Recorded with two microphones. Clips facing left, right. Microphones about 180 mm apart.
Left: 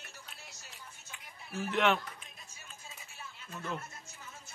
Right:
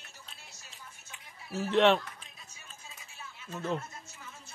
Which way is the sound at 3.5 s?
30° right (ahead or behind).